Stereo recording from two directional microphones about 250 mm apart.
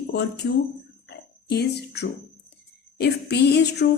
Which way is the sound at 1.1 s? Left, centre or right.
Left.